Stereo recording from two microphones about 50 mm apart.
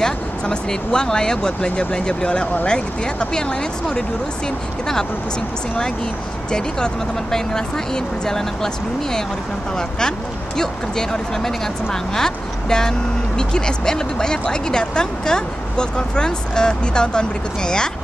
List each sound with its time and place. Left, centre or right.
0.0 s speech: centre
6.5 s speech: centre